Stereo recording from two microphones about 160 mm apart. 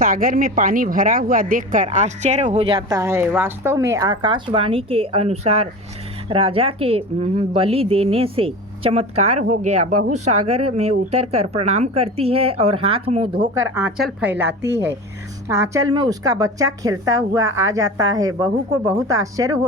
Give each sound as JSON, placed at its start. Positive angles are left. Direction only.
{"t": 0.0, "sound": "speech", "side_deg": -60}
{"t": 2.9, "sound": "a woman's voice", "side_deg": -20}
{"t": 13.4, "sound": "a woman's voice", "side_deg": -20}
{"t": 13.9, "sound": "a woman's voice", "side_deg": -5}